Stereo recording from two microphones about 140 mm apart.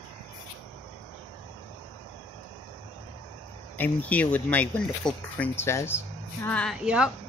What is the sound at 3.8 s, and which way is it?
Speech, 10° left (ahead or behind).